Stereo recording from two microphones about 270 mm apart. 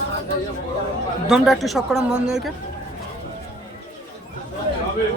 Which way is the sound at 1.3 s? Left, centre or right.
Centre.